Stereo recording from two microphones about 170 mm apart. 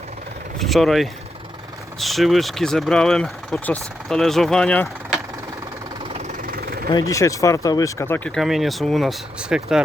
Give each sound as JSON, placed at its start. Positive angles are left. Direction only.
{"t": 0.6, "sound": "speech", "side_deg": 0}
{"t": 6.1, "sound": "vehicle", "side_deg": -50}
{"t": 6.9, "sound": "speech", "side_deg": 20}
{"t": 8.4, "sound": "speech", "side_deg": 0}